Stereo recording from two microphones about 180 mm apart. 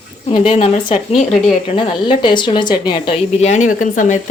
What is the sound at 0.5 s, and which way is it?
Speech, 40° left (ahead or behind).